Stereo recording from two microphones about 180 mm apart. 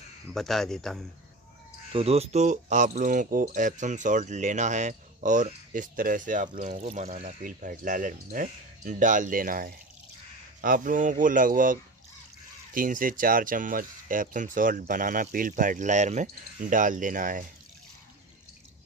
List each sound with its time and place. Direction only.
0.3 s speech: centre (ahead or behind)
1.9 s speech: 35° right (ahead or behind)